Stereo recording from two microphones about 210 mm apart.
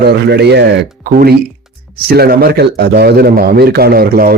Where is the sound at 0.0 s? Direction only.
50° right (ahead or behind).